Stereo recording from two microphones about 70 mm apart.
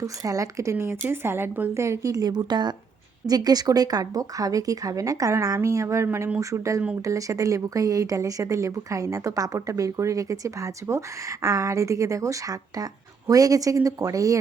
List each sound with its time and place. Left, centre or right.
0.0 s speech: right
1.7 s speech: right
3.2 s speech: right